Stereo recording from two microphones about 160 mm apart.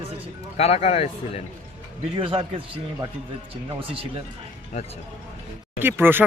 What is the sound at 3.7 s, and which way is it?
Speech, 35° right (ahead or behind).